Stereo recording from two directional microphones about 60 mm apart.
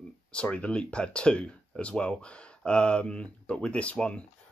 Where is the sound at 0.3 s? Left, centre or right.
Centre.